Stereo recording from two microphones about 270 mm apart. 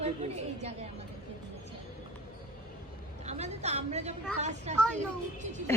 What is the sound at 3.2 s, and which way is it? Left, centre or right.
A woman's voice, right.